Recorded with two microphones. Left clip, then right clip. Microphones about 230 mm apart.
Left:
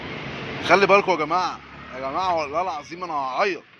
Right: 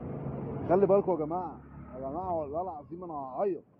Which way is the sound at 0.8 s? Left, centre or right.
Left.